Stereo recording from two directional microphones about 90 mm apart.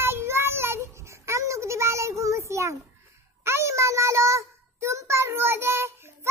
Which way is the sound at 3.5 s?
30° right (ahead or behind).